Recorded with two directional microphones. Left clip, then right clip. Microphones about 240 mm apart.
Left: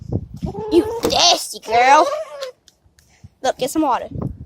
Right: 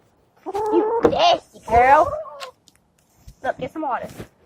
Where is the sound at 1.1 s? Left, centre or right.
Left.